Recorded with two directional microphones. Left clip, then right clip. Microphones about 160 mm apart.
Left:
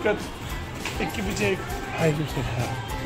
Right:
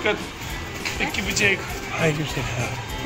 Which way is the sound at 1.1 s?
55° left (ahead or behind).